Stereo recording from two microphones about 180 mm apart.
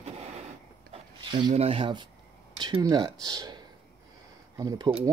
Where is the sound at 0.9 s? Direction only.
25° right (ahead or behind).